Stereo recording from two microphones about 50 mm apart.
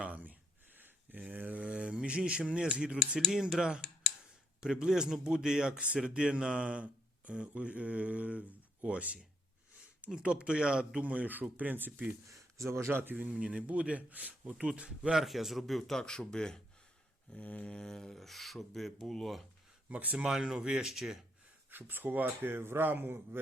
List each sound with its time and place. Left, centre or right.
0.0 s a sound: right
2.7 s a man's voice: centre
11.0 s speech: right
12.3 s speech: right
12.9 s a man's voice: right
13.1 s speech: right
15.1 s speech: centre
17.3 s a sound: left
17.7 s speech: centre
19.9 s speech: right
20.1 s a man's voice: centre
21.7 s speech: right
22.4 s a man's voice: right